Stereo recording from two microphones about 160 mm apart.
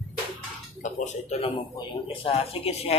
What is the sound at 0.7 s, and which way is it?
Speech, 55° left (ahead or behind).